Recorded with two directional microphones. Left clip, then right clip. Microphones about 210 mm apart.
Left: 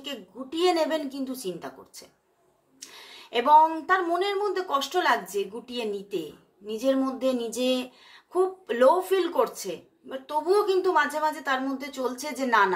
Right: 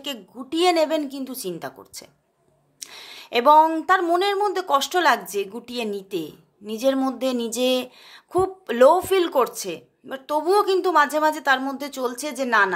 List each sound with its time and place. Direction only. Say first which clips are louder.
0.0 s a woman's voice: right 4 dB; 45° right (ahead or behind)